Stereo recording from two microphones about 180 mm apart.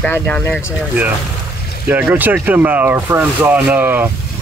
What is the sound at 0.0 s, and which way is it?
Speech, 10° left (ahead or behind).